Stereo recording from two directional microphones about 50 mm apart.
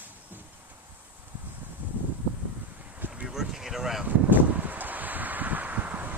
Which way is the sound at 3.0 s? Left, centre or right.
Right.